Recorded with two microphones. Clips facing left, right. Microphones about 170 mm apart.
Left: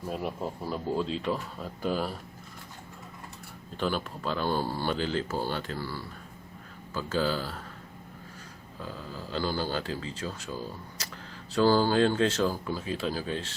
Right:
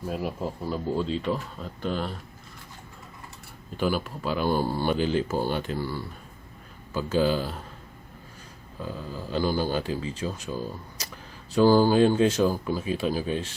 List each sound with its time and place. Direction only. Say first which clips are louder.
0.1 s speech: right 2 dB; centre (ahead or behind)
3.8 s speech: right 4 dB; 5° right (ahead or behind)
8.8 s speech: right 4 dB; 15° right (ahead or behind)